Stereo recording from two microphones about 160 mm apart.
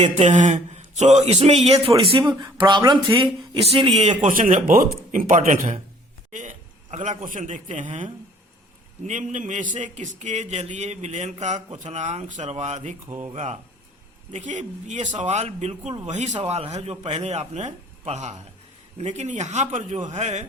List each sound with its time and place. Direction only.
0.2 s a man's voice: 50° right (ahead or behind)
2.1 s speech: 30° right (ahead or behind)
4.2 s a man's voice: 55° right (ahead or behind)
9.0 s a man's voice: 50° right (ahead or behind)
13.1 s speech: 15° right (ahead or behind)
13.3 s a man's voice: 45° right (ahead or behind)